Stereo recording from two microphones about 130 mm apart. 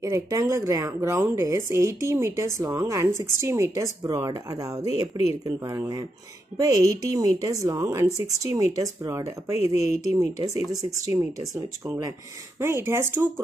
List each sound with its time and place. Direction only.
0.0 s speech: 25° right (ahead or behind)